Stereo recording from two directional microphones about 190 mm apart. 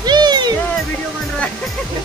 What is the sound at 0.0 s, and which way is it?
Music, 20° right (ahead or behind).